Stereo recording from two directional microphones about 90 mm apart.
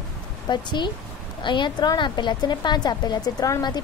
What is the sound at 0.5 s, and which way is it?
A woman's voice, 55° left (ahead or behind).